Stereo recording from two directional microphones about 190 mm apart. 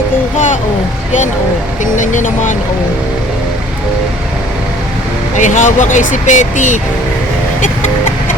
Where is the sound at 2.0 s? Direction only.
40° left (ahead or behind).